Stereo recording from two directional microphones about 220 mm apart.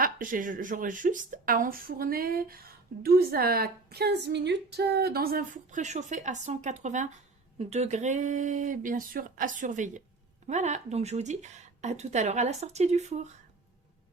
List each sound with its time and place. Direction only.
0.0 s speech: 40° right (ahead or behind)